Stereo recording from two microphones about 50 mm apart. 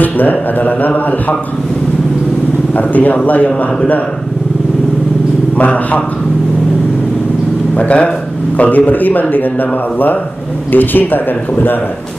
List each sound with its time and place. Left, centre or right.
0.0 s speech: left
2.8 s speech: left
5.6 s a man's voice: left
7.7 s speech: left